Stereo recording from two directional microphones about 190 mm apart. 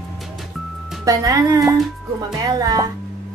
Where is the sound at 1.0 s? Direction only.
20° right (ahead or behind).